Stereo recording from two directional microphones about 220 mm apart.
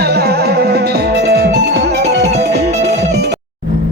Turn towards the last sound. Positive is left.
turn(degrees=-50)  # may be behind; listen again after turning